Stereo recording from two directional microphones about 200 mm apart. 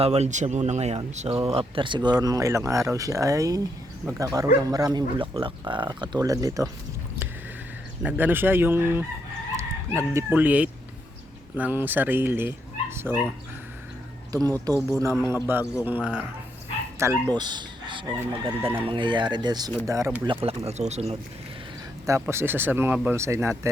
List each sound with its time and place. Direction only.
0.0 s speech: 35° right (ahead or behind); by 6.7 s 15° right (ahead or behind)
8.0 s speech: 10° right (ahead or behind)
14.3 s speech: 15° right (ahead or behind)
14.8 s a man's voice: centre (ahead or behind)
17.0 s speech: 15° right (ahead or behind)
18.2 s speech: 10° right (ahead or behind)
18.9 s speech: 25° right (ahead or behind)
20.2 s speech: 25° right (ahead or behind)
22.0 s speech: 15° right (ahead or behind)